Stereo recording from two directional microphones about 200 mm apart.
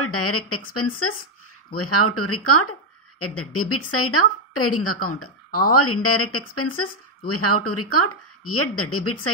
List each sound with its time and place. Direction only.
0.0 s speech: 90° left